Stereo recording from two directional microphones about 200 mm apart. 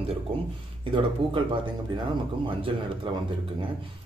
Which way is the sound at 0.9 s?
25° right (ahead or behind).